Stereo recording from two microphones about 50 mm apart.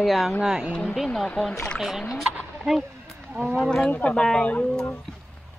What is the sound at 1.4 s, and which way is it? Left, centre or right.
Speech, centre.